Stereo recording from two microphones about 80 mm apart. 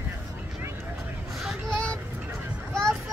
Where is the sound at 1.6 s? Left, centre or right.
Centre.